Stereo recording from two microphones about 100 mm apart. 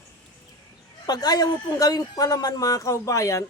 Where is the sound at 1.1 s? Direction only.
40° left (ahead or behind).